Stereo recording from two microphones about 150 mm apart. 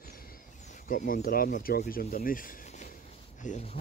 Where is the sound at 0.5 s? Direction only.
55° left (ahead or behind); by 2.0 s 75° left (ahead or behind).